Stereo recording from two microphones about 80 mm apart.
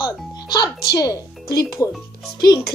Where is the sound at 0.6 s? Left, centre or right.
Left.